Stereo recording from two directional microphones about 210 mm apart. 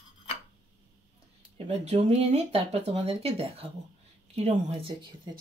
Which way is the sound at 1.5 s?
30° right (ahead or behind).